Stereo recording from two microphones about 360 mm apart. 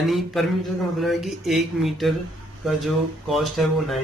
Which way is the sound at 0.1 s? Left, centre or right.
Centre.